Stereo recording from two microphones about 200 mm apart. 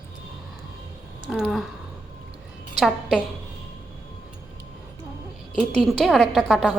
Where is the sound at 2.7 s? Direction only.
Centre (ahead or behind).